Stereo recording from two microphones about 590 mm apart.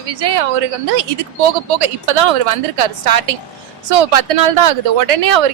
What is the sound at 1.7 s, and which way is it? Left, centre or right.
A woman's voice, right.